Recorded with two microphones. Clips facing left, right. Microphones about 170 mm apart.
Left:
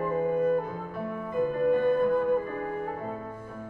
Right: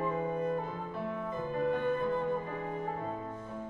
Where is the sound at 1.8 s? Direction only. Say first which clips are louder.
Left 7 dB; 50° left (ahead or behind).